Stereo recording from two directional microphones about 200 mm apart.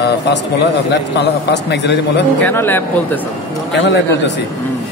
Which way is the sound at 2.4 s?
10° left (ahead or behind).